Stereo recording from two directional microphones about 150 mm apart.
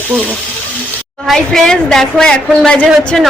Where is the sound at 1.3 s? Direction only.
5° left (ahead or behind).